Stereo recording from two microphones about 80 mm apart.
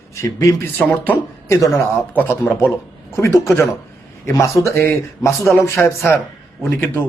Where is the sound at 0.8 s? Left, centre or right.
Centre.